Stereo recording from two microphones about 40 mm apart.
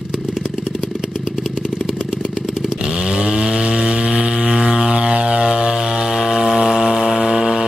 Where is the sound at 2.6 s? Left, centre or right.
Centre.